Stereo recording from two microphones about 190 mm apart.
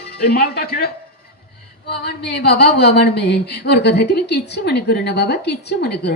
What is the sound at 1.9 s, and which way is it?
A woman's voice, 60° left (ahead or behind).